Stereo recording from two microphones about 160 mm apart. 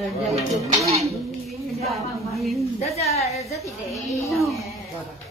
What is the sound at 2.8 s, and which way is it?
Speech, 40° left (ahead or behind).